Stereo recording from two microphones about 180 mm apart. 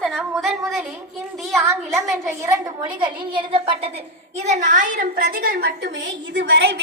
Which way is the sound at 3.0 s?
30° right (ahead or behind).